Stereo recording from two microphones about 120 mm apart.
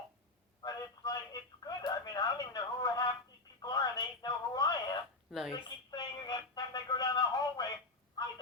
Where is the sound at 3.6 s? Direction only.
35° left (ahead or behind).